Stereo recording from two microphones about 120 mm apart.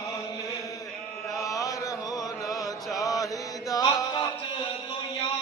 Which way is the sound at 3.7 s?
30° left (ahead or behind).